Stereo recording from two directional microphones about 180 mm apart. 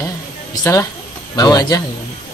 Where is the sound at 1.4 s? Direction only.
20° left (ahead or behind).